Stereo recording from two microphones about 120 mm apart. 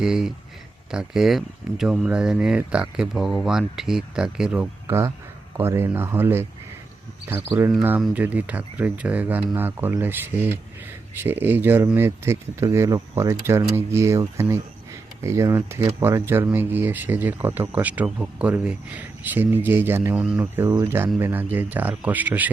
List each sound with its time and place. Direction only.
0.0 s speech: 5° right (ahead or behind)
4.9 s speech: 25° right (ahead or behind); by 20.5 s 10° right (ahead or behind)
20.8 s speech: 20° right (ahead or behind)